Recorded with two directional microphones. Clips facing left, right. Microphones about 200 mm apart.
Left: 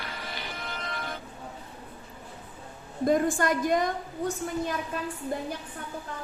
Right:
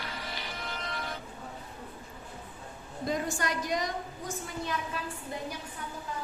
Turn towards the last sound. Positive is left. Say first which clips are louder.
# left 7 dB
turn(degrees=55)  # may be behind; listen again after turning